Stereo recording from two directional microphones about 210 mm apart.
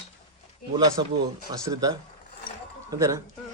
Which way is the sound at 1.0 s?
20° right (ahead or behind).